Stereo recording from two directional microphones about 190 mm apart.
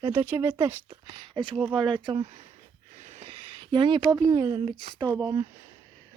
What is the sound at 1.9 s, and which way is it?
Speech, 25° right (ahead or behind).